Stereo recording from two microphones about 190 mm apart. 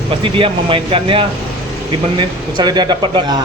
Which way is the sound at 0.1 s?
30° right (ahead or behind).